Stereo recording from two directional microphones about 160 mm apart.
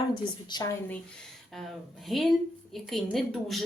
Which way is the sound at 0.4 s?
25° left (ahead or behind).